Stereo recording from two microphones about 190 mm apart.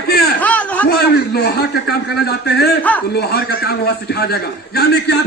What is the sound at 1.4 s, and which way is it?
A man's voice, 55° left (ahead or behind).